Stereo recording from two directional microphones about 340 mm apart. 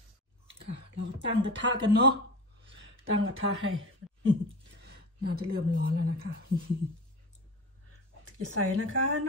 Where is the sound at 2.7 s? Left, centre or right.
Right.